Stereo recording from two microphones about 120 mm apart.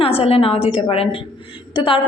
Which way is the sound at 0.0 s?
55° left (ahead or behind).